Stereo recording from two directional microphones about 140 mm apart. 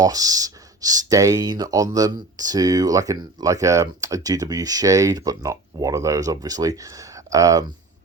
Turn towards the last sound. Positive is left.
turn(degrees=-25)  # may be behind; listen again after turning